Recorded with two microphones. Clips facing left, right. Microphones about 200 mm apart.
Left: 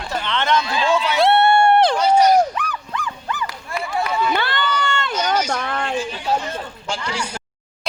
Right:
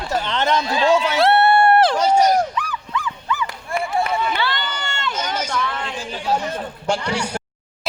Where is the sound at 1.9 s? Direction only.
45° right (ahead or behind).